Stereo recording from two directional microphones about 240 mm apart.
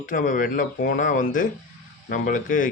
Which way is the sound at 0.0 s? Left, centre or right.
Left.